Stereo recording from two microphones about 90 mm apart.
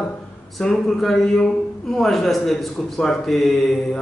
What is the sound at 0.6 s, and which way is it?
A man's voice, 5° left (ahead or behind).